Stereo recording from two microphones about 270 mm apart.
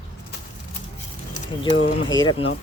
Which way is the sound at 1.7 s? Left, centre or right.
Left.